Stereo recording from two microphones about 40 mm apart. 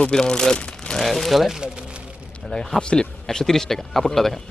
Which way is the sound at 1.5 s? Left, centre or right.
Right.